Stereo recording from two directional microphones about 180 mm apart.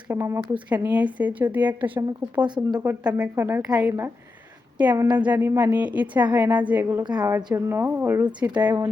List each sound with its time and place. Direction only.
0.1 s a woman's voice: 15° right (ahead or behind)
2.6 s speech: 20° right (ahead or behind)
3.0 s a woman's voice: 5° right (ahead or behind)
7.0 s a woman's voice: 20° right (ahead or behind)